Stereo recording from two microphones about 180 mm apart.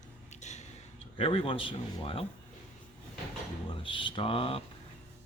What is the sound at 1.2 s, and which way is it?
Speech, 30° left (ahead or behind).